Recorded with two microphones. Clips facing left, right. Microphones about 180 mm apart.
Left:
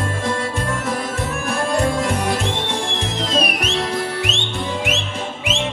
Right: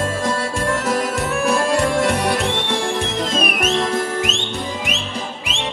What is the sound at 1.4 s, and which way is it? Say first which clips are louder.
Music: right 2 dB; 75° right (ahead or behind).